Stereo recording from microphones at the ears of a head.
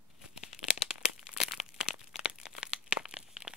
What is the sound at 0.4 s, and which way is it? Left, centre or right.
Crumpling, left.